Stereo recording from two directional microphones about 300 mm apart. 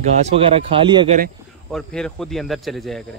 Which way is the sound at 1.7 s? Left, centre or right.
Centre.